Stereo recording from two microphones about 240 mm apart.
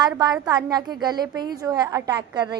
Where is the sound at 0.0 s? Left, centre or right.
Centre.